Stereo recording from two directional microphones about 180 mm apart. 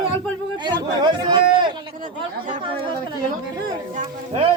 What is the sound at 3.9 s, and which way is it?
Speech, 35° right (ahead or behind).